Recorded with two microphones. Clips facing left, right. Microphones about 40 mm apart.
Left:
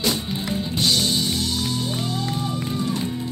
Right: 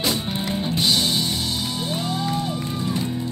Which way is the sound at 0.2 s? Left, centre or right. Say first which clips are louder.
Right 1 dB; right.